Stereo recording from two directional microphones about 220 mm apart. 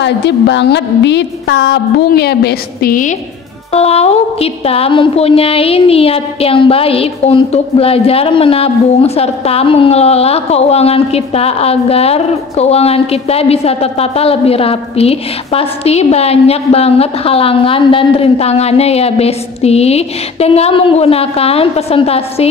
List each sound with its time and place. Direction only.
0.0 s a woman's voice: 50° left (ahead or behind); by 22.5 s 25° left (ahead or behind)